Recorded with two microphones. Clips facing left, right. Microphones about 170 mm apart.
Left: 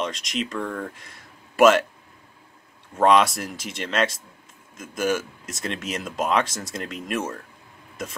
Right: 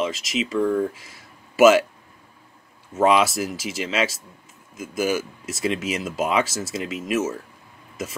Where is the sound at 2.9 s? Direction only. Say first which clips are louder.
Even; 5° right (ahead or behind).